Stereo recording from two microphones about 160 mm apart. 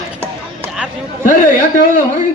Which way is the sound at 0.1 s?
15° right (ahead or behind).